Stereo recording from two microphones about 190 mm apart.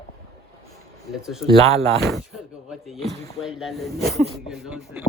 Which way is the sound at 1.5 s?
30° right (ahead or behind).